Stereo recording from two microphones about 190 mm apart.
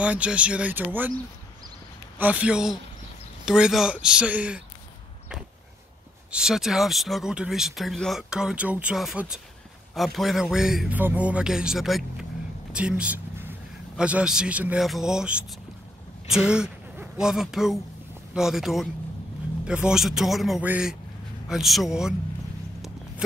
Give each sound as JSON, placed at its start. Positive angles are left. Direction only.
{"t": 0.0, "sound": "speech", "side_deg": -5}
{"t": 2.1, "sound": "speech", "side_deg": -10}
{"t": 6.3, "sound": "speech", "side_deg": -5}